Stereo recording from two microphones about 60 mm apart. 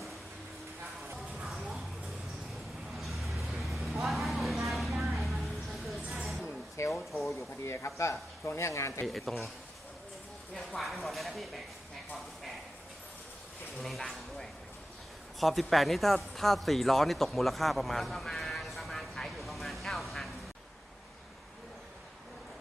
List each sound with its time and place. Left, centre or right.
1.1 s music: centre
3.0 s vehicle: centre
6.1 s a sound: centre
6.8 s a sound: left
7.6 s speech: left
9.0 s speech: centre
10.5 s speech: centre
13.8 s speech: centre